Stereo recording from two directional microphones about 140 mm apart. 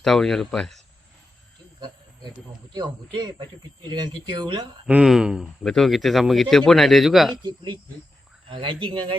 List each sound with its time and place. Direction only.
0.0 s speech: centre (ahead or behind)
2.7 s speech: 30° right (ahead or behind)
4.9 s speech: 5° right (ahead or behind)
7.4 s speech: 35° right (ahead or behind)